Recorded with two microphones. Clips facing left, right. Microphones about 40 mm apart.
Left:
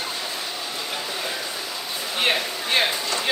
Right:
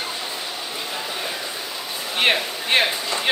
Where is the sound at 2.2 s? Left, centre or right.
Right.